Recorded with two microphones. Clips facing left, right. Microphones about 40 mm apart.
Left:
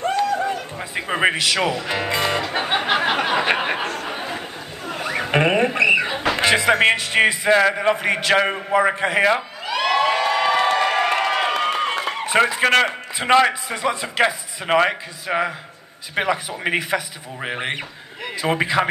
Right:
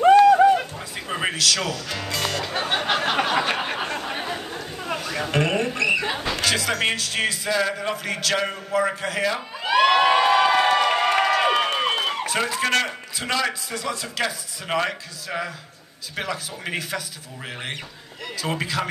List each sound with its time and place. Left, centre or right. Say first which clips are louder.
0.7 s speech: left 6 dB; left
3.3 s a sound: left 3 dB; left
4.9 s a sound: left 4 dB; left
6.3 s a man's voice: left 9 dB; left
9.7 s crowd: right 3 dB; right
10.0 s crowd: right 2 dB; centre
10.4 s crowd: even; centre
11.0 s crowd: even; left
12.3 s a man's voice: left 10 dB; left